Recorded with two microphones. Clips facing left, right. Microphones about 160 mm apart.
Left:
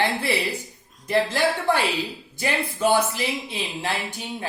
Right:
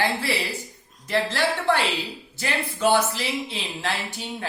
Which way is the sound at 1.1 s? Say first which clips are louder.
Left 2 dB; 15° left (ahead or behind).